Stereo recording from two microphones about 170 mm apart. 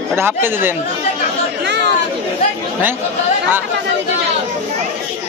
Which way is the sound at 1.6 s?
85° right.